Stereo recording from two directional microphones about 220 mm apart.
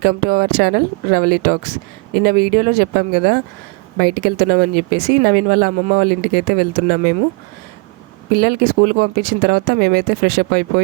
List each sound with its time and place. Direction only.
0.0 s speech: 45° right (ahead or behind)
8.4 s speech: 45° right (ahead or behind)